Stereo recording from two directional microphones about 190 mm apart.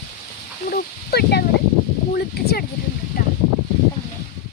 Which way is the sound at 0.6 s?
55° left (ahead or behind).